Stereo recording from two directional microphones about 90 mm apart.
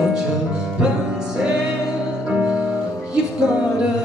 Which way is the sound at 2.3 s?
10° right (ahead or behind).